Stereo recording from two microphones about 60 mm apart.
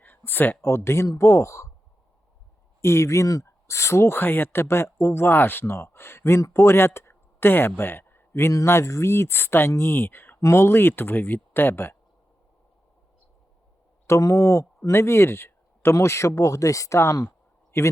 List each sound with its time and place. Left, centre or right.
0.0 s a sound: left
0.6 s speech: left
2.8 s speech: left
8.6 s speech: left
10.4 s speech: left
14.1 s speech: left
14.8 s speech: left
17.2 s a sound: left